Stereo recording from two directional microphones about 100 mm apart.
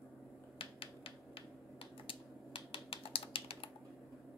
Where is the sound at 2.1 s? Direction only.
60° left (ahead or behind).